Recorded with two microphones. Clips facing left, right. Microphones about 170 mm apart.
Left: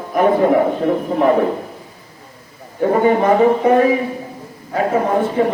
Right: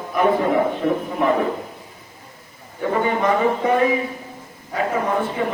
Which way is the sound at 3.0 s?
40° left (ahead or behind).